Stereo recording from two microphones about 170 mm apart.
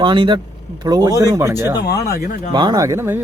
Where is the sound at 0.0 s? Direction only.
30° right (ahead or behind).